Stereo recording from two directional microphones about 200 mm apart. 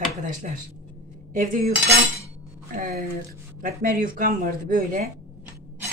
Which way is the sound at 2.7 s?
45° right (ahead or behind).